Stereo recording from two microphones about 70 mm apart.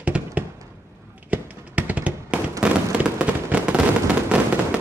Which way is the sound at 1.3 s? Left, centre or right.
Right.